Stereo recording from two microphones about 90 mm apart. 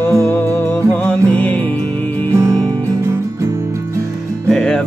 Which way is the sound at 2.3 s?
40° right (ahead or behind).